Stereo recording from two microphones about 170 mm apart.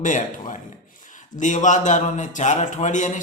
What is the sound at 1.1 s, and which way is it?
A man's voice, 45° left (ahead or behind).